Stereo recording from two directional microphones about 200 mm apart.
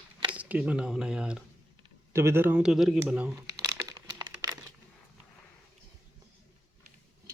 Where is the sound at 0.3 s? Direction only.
5° right (ahead or behind).